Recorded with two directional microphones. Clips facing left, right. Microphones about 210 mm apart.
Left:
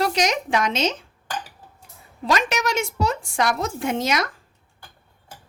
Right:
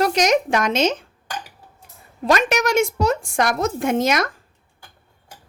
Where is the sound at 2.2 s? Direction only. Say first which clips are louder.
Right 4 dB; 50° right (ahead or behind).